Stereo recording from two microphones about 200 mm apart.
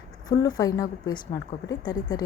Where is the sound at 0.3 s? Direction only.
20° left (ahead or behind).